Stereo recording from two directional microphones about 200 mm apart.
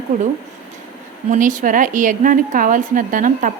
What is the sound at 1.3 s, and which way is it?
A woman's voice, 40° right (ahead or behind).